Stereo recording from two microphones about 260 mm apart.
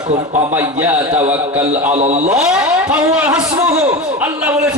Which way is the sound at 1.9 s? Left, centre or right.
Right.